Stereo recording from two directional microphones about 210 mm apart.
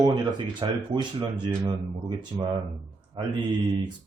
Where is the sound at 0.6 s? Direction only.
25° right (ahead or behind).